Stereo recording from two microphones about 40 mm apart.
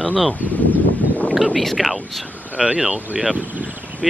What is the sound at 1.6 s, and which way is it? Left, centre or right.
Speech, centre.